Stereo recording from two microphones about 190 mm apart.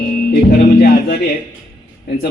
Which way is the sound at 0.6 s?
55° left (ahead or behind).